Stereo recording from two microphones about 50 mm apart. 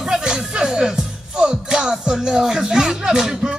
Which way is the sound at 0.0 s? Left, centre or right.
Centre.